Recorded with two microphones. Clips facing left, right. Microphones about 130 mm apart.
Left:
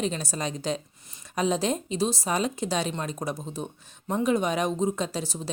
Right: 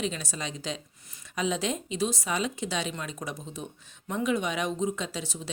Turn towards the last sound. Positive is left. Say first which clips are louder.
# left 5 dB
turn(degrees=40)  # may be behind; listen again after turning